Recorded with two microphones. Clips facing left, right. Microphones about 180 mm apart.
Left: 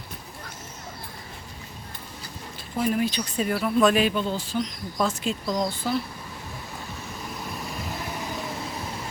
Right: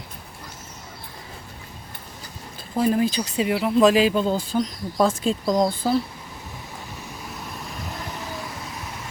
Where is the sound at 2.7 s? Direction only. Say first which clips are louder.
Right 4 dB; 35° right (ahead or behind).